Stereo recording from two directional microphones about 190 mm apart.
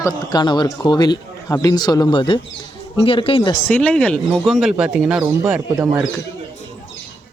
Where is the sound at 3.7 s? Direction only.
5° left (ahead or behind); by 6.0 s 15° right (ahead or behind).